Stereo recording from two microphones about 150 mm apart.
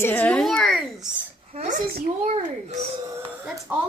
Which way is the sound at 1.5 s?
50° right (ahead or behind).